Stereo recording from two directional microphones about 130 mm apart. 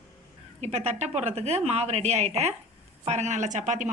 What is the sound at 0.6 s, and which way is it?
A woman's voice, 55° right (ahead or behind).